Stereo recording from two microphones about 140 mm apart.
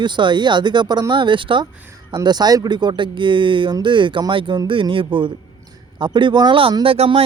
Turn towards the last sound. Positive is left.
turn(degrees=-45)  # may be behind; listen again after turning